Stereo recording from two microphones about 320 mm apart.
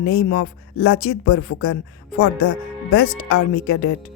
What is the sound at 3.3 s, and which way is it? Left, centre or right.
Speech, left.